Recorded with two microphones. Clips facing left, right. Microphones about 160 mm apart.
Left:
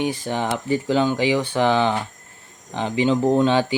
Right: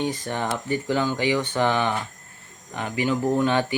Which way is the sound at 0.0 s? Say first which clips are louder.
Left 3 dB; 15° left (ahead or behind).